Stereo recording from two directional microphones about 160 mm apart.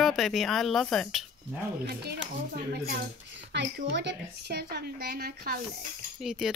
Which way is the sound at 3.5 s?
90° right.